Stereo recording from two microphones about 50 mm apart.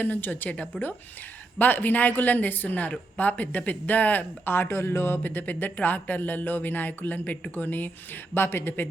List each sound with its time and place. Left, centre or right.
0.0 s speech: left
1.5 s speech: left
8.3 s speech: left